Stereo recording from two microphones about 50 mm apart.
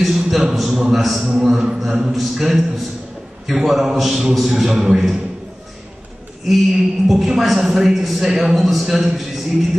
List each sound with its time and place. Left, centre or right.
0.0 s a man's voice: centre
1.2 s a man's voice: centre
6.4 s a man's voice: centre